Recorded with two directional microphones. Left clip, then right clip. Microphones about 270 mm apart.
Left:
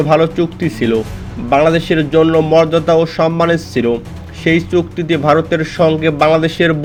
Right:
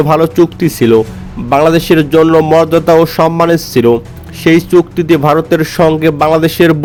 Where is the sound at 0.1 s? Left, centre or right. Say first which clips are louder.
Right 3 dB; right.